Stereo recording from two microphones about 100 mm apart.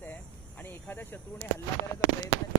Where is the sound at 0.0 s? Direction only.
20° left (ahead or behind).